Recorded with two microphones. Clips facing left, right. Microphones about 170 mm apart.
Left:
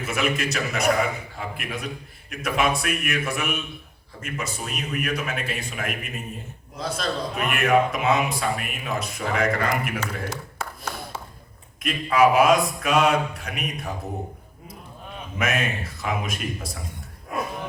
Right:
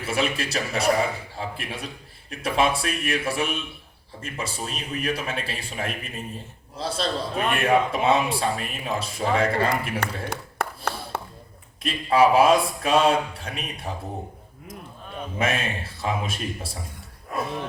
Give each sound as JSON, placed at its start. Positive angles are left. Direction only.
{"t": 0.0, "sound": "a man's voice", "side_deg": -30}
{"t": 10.2, "sound": "tap", "side_deg": -60}
{"t": 11.8, "sound": "a man's voice", "side_deg": -30}
{"t": 15.4, "sound": "a man's voice", "side_deg": -30}